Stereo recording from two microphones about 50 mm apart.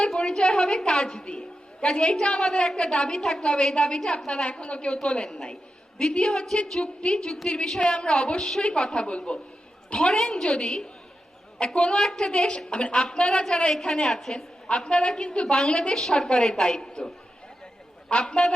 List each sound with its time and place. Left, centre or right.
0.1 s a woman's voice: centre
18.1 s a woman's voice: centre